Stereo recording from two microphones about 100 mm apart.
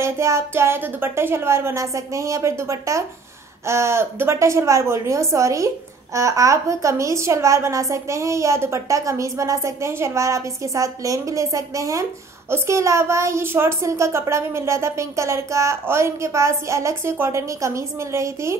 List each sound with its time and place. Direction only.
0.0 s speech: 30° right (ahead or behind)